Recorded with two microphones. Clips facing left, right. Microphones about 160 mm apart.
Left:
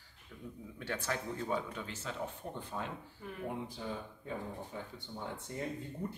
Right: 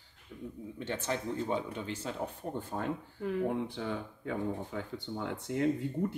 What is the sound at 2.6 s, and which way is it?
Speech, 45° right (ahead or behind).